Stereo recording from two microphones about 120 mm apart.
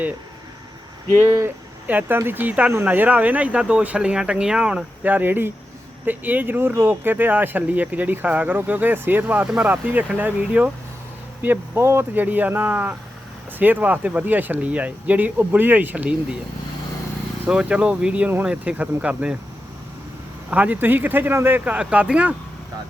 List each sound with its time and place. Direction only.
1.9 s speech: 15° right (ahead or behind)
17.4 s speech: 10° right (ahead or behind)
20.5 s speech: 15° right (ahead or behind)